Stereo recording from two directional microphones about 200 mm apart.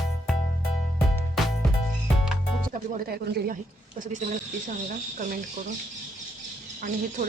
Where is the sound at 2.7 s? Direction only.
45° right (ahead or behind).